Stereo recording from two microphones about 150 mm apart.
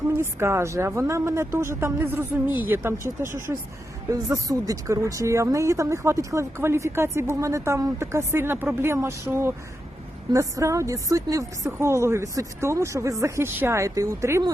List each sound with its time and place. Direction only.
0.2 s a woman's voice: 15° right (ahead or behind)
4.3 s a woman's voice: 25° right (ahead or behind)